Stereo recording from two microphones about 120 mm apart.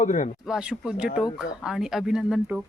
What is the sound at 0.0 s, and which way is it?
Speech, 90° left.